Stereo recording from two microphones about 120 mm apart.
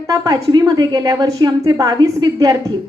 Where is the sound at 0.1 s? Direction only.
30° right (ahead or behind).